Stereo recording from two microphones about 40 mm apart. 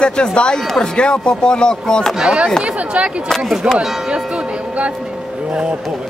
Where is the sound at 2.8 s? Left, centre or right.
Right.